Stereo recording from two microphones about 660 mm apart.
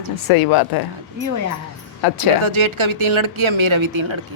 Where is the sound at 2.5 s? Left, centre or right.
Right.